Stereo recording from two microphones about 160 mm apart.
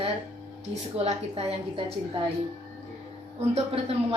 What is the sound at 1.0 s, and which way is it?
Speech, 40° right (ahead or behind).